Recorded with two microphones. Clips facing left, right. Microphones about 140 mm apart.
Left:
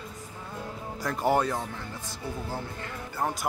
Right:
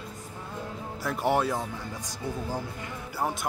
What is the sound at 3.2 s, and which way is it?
Speech, 5° right (ahead or behind).